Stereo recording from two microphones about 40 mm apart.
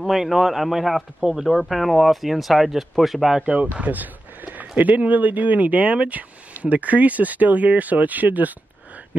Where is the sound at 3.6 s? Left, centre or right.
Right.